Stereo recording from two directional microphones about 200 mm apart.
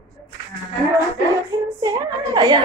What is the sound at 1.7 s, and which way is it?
Speech, 20° right (ahead or behind).